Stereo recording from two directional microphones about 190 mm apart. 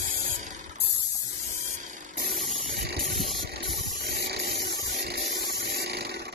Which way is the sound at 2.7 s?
60° right (ahead or behind).